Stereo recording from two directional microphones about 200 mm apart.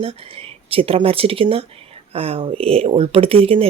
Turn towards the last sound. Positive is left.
turn(degrees=-30)  # may be behind; listen again after turning